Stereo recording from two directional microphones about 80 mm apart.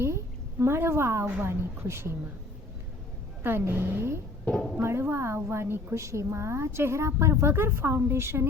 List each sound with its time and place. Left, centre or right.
0.6 s a woman's voice: right
3.4 s a woman's voice: right
4.4 s speech: centre
4.8 s a woman's voice: right